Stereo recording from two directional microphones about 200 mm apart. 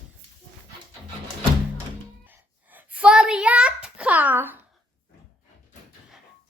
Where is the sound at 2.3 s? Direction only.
5° right (ahead or behind).